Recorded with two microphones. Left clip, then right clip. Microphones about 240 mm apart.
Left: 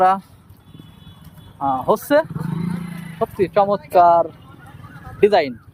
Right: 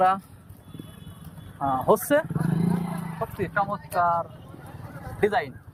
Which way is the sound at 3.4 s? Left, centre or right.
Left.